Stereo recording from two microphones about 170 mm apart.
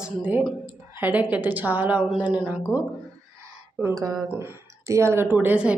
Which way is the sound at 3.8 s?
20° right (ahead or behind).